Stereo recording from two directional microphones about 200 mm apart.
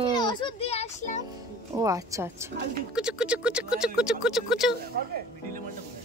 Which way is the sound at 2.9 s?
5° right (ahead or behind).